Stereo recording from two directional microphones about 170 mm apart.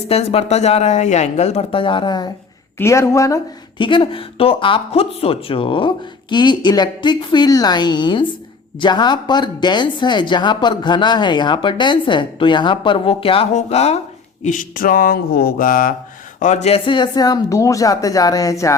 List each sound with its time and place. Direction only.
0.1 s speech: 35° left (ahead or behind)
14.4 s a sound: 50° left (ahead or behind)
16.4 s speech: 45° left (ahead or behind); by 18.7 s 20° left (ahead or behind)